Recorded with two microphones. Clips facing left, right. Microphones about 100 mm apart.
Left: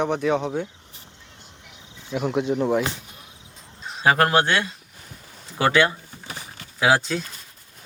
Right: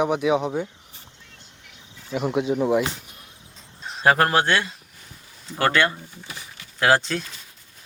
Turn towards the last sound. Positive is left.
turn(degrees=5)  # may be behind; listen again after turning